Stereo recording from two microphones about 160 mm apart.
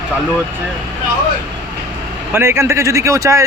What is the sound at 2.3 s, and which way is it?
Speech, 15° right (ahead or behind).